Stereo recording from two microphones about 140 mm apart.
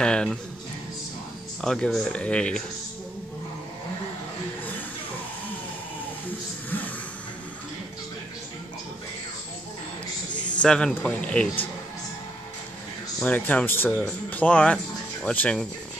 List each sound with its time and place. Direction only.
0.0 s speech: 5° left (ahead or behind)
1.6 s speech: 5° left (ahead or behind)
10.3 s a sound: 35° left (ahead or behind)
10.6 s speech: 5° left (ahead or behind)
13.2 s speech: 10° left (ahead or behind)